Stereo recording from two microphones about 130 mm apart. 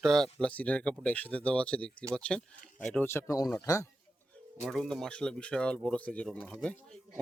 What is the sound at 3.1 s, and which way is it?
Speech, 20° left (ahead or behind).